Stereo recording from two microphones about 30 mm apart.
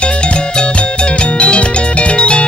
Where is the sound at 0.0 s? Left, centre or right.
Left.